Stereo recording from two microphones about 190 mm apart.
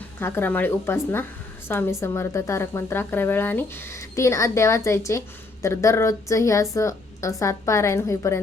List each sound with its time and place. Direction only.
0.2 s a woman's voice: 10° left (ahead or behind)